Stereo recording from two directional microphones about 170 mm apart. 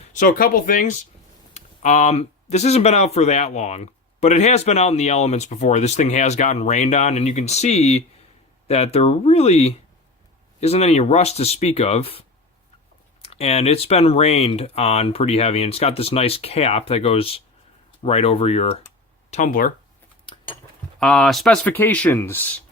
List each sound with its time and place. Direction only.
0.0 s speech: 50° left (ahead or behind)
13.2 s speech: 35° left (ahead or behind)
19.3 s speech: 50° left (ahead or behind)
21.0 s speech: centre (ahead or behind)